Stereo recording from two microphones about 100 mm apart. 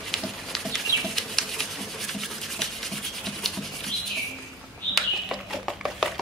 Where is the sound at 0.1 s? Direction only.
5° left (ahead or behind).